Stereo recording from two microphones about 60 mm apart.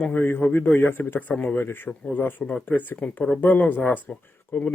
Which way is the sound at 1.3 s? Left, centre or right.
Centre.